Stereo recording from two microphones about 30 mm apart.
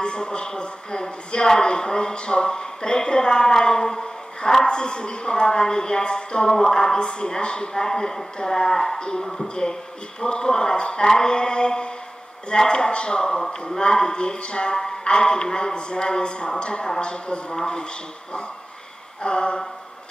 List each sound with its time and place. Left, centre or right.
0.0 s speech: left
4.6 s a man's voice: left
19.2 s a man's voice: left